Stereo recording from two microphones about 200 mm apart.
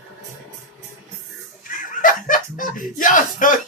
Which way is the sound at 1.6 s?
40° left (ahead or behind).